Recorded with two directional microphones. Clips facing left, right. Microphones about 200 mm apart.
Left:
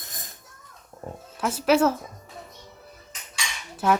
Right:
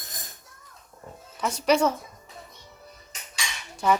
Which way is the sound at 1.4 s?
5° left (ahead or behind).